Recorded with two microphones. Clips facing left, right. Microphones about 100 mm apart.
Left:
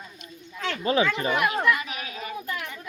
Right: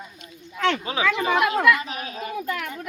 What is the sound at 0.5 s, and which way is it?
Speech, 85° right.